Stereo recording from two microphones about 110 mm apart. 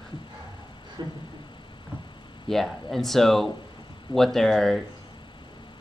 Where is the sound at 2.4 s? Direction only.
5° left (ahead or behind).